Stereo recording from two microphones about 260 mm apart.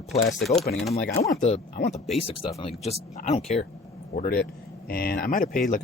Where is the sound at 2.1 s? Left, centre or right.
Left.